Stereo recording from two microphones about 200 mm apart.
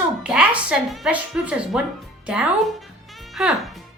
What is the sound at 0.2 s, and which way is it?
Speech, 5° right (ahead or behind).